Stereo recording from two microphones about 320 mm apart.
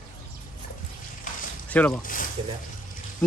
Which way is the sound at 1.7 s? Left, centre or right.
Centre.